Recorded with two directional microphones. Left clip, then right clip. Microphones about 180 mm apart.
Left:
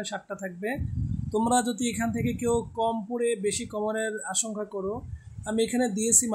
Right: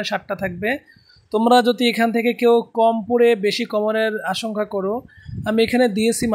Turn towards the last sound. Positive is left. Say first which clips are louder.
# right 8 dB
turn(degrees=-20)  # may be behind; listen again after turning